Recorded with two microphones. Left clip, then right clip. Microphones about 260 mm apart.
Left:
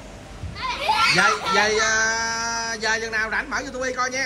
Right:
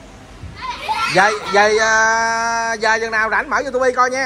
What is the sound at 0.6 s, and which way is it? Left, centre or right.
A child's voice, centre.